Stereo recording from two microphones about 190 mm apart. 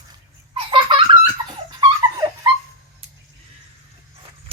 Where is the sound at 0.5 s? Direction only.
25° right (ahead or behind).